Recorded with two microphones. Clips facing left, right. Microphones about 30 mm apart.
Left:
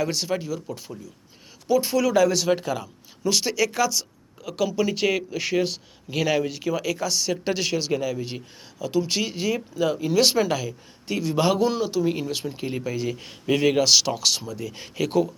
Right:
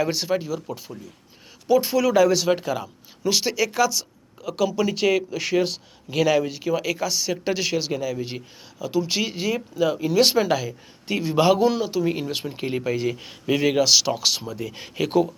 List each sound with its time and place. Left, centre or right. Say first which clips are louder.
0.0 s speech: right 2 dB; centre
13.2 s speech: left 2 dB; centre